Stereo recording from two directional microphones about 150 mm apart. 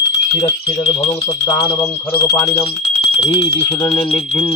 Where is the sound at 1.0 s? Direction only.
35° left (ahead or behind).